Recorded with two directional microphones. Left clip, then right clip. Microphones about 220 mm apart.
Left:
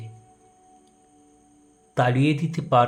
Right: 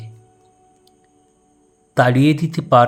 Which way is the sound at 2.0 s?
25° right (ahead or behind).